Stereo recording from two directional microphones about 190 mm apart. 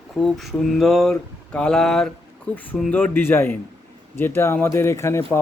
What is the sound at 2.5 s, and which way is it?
Speech, 5° left (ahead or behind).